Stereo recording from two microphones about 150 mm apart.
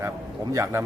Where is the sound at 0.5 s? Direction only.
20° right (ahead or behind).